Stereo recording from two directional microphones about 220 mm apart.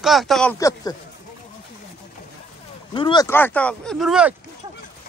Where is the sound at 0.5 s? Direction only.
15° left (ahead or behind).